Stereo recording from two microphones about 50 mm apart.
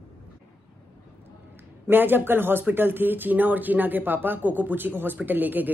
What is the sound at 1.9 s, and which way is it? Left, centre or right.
A man's voice, right.